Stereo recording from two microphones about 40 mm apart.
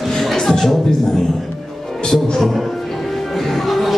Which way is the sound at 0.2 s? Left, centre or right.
Centre.